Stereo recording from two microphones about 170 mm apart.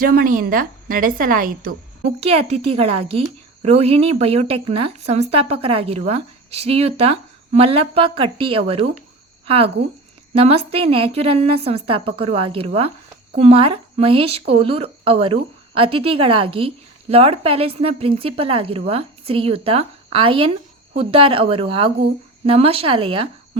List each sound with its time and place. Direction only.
0.0 s a woman's voice: 60° right (ahead or behind)
2.0 s a woman's voice: 35° right (ahead or behind)
10.3 s a woman's voice: 35° right (ahead or behind)